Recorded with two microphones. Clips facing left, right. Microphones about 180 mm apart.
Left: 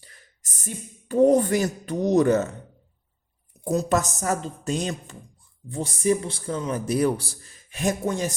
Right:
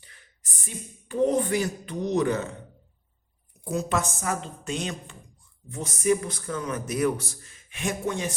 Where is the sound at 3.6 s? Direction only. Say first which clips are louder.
Left 4 dB; 40° left (ahead or behind).